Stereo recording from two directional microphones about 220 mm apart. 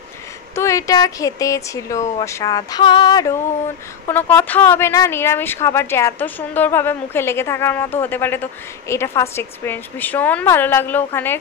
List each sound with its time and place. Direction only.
0.6 s speech: 15° left (ahead or behind)